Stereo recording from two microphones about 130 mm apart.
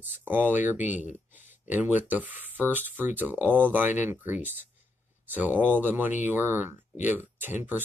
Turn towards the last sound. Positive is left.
turn(degrees=-15)  # may be behind; listen again after turning